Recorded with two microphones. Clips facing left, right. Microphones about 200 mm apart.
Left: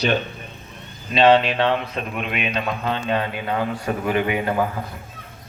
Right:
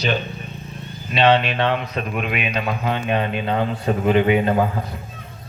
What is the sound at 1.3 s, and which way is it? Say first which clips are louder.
Speech: left 1 dB; 30° left (ahead or behind).